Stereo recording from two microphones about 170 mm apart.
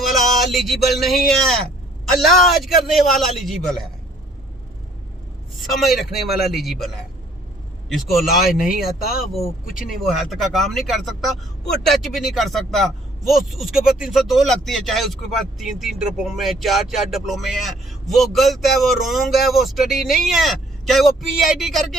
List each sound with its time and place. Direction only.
0.0 s speech: centre (ahead or behind)
5.8 s speech: centre (ahead or behind)
7.9 s speech: centre (ahead or behind)
8.6 s speech: 60° left (ahead or behind)
10.0 s speech: centre (ahead or behind)